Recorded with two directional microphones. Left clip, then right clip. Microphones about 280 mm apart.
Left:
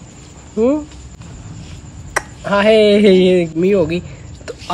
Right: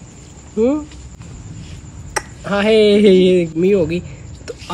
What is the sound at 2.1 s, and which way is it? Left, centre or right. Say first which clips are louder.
Speech: left 4 dB; centre.